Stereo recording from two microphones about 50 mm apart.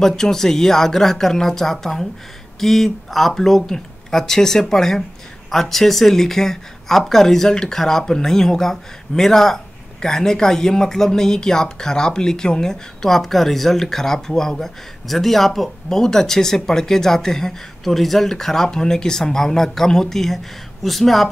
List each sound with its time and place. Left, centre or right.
0.0 s speech: centre